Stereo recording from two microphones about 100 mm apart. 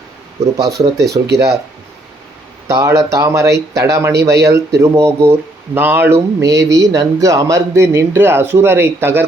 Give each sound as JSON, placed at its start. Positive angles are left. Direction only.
{"t": 0.5, "sound": "speech", "side_deg": -35}
{"t": 2.6, "sound": "speech", "side_deg": -30}